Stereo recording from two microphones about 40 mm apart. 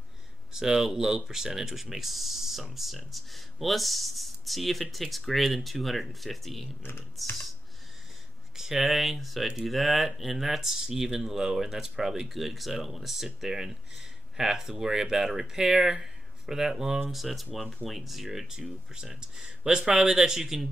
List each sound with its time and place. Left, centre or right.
0.5 s speech: centre
6.8 s speech: left
8.5 s speech: centre
17.1 s speech: centre
18.9 s speech: centre
20.1 s speech: centre